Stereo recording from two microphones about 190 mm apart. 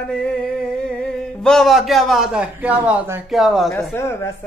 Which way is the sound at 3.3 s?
Centre (ahead or behind).